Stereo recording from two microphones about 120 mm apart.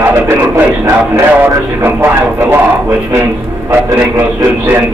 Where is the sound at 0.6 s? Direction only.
20° right (ahead or behind).